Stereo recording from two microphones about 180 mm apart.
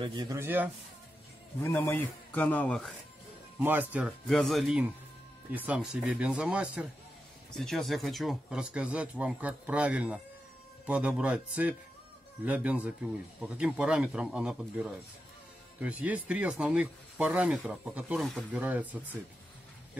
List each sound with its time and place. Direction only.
0.0 s speech: 25° right (ahead or behind)
1.6 s a man's voice: 10° left (ahead or behind)
3.5 s a man's voice: 10° right (ahead or behind)